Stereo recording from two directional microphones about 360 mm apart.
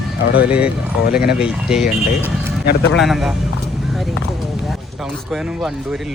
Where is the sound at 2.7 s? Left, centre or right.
Left.